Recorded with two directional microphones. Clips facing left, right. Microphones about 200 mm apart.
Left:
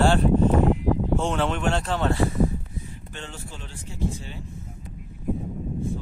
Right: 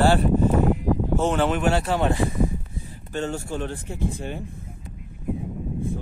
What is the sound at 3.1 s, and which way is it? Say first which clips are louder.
Speech: right 13 dB; 45° right (ahead or behind).